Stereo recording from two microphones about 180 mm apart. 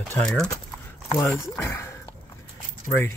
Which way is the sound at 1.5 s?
15° left (ahead or behind).